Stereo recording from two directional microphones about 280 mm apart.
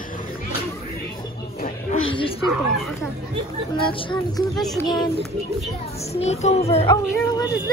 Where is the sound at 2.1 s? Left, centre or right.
Centre.